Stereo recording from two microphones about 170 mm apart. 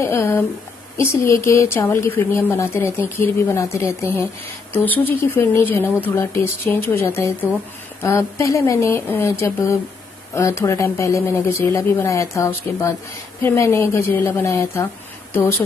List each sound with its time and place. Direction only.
0.0 s speech: 15° left (ahead or behind)